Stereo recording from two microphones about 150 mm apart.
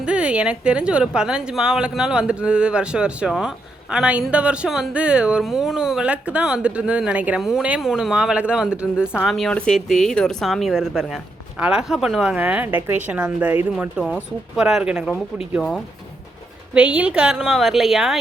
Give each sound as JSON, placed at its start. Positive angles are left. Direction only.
{"t": 0.0, "sound": "a woman's voice", "side_deg": -5}
{"t": 16.7, "sound": "a woman's voice", "side_deg": -5}